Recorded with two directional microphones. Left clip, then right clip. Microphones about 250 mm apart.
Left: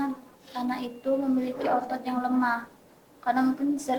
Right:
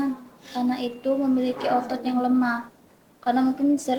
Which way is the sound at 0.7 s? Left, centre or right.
Right.